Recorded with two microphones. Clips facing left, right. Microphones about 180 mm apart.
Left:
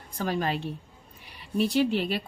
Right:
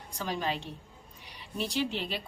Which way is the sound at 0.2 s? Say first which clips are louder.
Left 5 dB; 55° left (ahead or behind).